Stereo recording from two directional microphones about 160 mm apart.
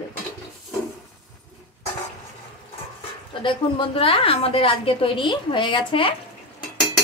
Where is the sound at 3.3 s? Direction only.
30° left (ahead or behind).